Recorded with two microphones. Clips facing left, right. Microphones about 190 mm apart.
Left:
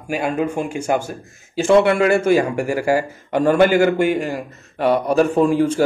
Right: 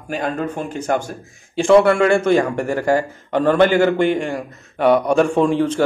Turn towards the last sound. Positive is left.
turn(degrees=10)  # may be behind; listen again after turning